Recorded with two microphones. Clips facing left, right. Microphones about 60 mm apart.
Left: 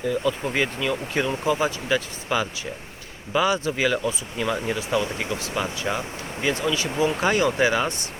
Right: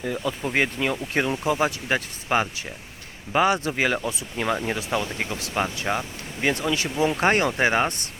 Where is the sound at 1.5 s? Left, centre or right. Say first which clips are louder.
Left 4 dB; right.